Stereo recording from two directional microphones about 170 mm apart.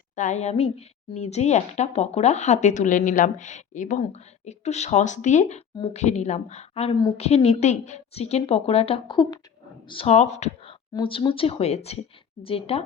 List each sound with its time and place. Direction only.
0.2 s a woman's voice: 45° left (ahead or behind)
6.9 s a woman's voice: 25° left (ahead or behind)
7.2 s a woman's voice: 40° left (ahead or behind)
10.9 s a woman's voice: 30° left (ahead or behind)